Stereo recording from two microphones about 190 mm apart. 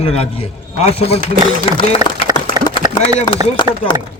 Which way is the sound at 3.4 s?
20° right (ahead or behind).